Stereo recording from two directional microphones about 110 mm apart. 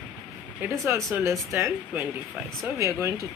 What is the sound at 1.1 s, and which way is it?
A woman's voice, 20° right (ahead or behind).